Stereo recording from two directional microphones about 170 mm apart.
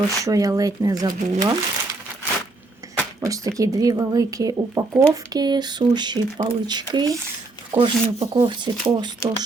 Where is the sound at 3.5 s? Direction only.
20° right (ahead or behind).